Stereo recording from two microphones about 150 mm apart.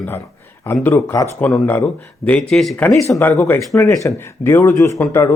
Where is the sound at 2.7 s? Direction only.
15° left (ahead or behind).